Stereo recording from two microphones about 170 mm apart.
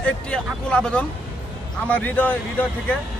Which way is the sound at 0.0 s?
5° left (ahead or behind).